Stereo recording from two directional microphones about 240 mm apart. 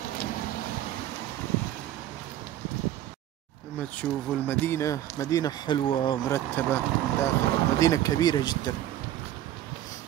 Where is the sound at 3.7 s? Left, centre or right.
Centre.